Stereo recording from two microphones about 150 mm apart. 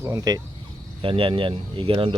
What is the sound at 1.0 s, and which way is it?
Speech, 35° right (ahead or behind).